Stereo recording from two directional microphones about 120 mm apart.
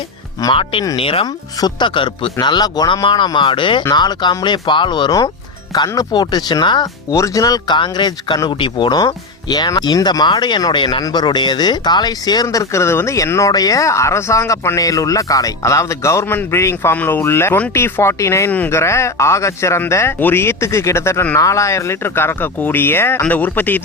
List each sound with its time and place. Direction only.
0.5 s speech: 45° left (ahead or behind); by 23.8 s 15° left (ahead or behind)